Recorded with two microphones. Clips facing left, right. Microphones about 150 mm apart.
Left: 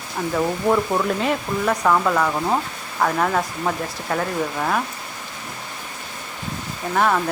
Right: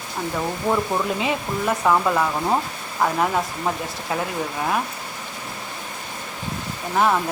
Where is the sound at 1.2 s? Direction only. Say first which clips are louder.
Left 2 dB; 5° right (ahead or behind).